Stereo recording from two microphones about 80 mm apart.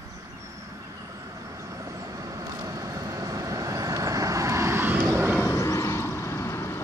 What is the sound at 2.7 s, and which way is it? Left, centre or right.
Vehicle, right.